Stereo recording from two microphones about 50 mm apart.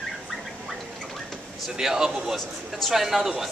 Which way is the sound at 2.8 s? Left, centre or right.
Centre.